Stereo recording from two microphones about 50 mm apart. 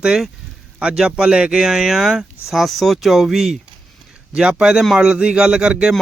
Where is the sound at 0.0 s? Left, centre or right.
Centre.